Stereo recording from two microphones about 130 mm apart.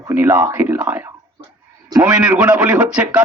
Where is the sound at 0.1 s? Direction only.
15° right (ahead or behind).